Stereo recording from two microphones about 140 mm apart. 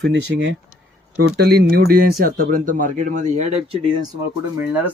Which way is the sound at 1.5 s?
90° right.